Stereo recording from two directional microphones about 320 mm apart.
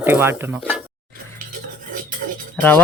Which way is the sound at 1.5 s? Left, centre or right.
Right.